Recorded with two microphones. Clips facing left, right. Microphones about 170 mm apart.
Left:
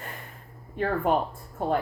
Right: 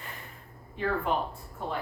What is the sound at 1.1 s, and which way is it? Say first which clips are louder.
Speech: left 5 dB; 45° left (ahead or behind).